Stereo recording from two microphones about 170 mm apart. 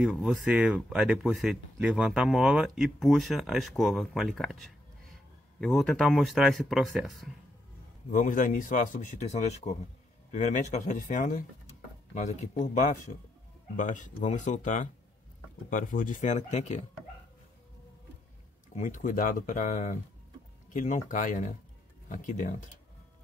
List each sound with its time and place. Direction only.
0.0 s speech: 5° right (ahead or behind)
8.1 s speech: 50° left (ahead or behind)
18.8 s speech: 50° left (ahead or behind)